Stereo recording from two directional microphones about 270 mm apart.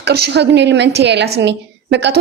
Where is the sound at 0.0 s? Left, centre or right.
Right.